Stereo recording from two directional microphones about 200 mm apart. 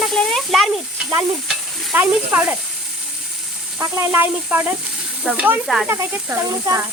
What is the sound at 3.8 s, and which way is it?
A child's voice, 15° right (ahead or behind).